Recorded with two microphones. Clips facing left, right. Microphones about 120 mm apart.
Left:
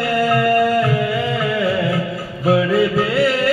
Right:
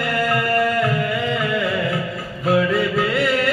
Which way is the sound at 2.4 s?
10° left (ahead or behind).